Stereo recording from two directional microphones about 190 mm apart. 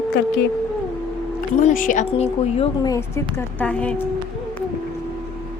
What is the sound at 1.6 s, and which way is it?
Speech, 45° left (ahead or behind).